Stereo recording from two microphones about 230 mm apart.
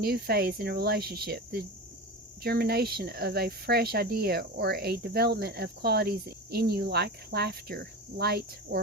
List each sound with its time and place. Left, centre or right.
0.0 s speech: right